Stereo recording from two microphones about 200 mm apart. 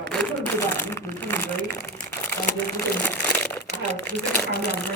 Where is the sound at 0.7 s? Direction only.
10° left (ahead or behind).